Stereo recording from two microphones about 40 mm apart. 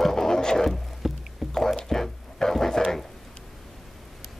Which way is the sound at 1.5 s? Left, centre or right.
Centre.